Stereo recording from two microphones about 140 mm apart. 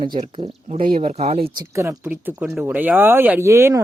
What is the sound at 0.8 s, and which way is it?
Speech, 85° right.